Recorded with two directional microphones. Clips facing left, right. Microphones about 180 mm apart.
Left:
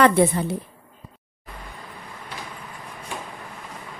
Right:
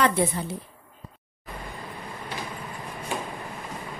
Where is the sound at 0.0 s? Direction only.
65° left (ahead or behind).